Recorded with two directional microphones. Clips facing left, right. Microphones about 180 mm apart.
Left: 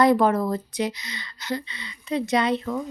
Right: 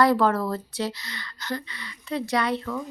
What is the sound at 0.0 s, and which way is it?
A woman's voice, 20° left (ahead or behind).